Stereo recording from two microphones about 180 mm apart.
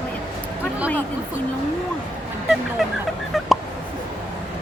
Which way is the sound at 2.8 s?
Centre (ahead or behind).